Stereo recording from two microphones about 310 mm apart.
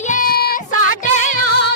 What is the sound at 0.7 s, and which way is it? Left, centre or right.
Music, right.